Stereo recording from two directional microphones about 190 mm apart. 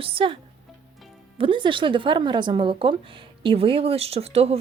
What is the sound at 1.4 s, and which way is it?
A woman's voice, 25° right (ahead or behind).